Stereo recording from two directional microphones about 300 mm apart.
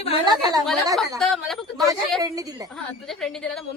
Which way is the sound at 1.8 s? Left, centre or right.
Centre.